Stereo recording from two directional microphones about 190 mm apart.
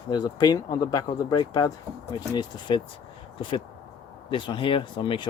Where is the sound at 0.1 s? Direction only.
20° left (ahead or behind).